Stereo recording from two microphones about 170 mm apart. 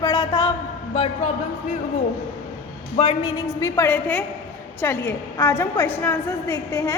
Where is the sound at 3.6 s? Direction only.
15° left (ahead or behind).